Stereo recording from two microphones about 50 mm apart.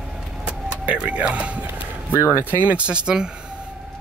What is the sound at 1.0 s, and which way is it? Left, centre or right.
Music, right.